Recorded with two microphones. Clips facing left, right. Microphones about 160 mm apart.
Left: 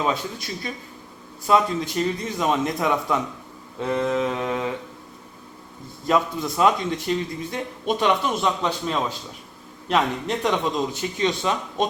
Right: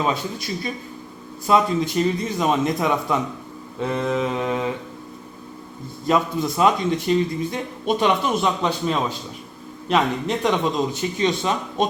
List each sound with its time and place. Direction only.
0.0 s speech: centre (ahead or behind)
6.1 s speech: centre (ahead or behind)